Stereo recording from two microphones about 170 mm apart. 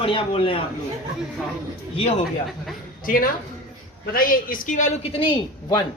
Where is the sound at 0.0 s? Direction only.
30° left (ahead or behind).